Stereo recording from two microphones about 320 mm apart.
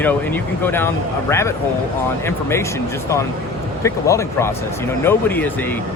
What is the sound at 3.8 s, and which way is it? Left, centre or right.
Speech, centre.